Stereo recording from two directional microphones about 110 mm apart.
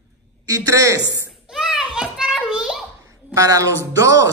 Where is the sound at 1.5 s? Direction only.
5° right (ahead or behind).